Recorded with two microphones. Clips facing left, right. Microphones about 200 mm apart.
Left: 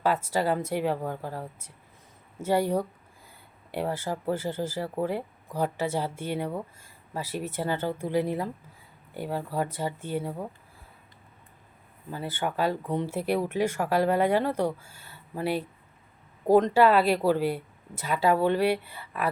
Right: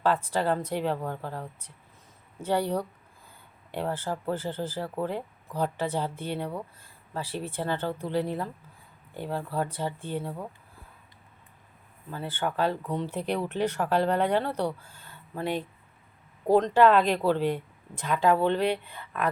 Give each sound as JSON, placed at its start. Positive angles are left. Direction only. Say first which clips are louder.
{"t": 0.0, "sound": "speech", "louder": "even", "side_deg": 10}
{"t": 12.1, "sound": "speech", "louder": "even", "side_deg": 10}
{"t": 16.7, "sound": "speech", "louder": "even", "side_deg": 10}